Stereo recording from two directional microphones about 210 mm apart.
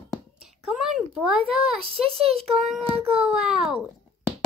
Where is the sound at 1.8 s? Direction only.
25° right (ahead or behind).